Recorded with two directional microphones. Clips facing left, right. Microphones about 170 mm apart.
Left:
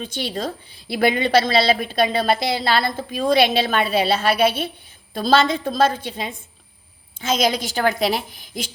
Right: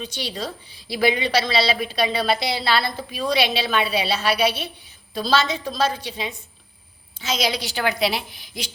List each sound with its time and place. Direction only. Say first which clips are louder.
0.0 s a woman's voice: left 4 dB; 50° left (ahead or behind)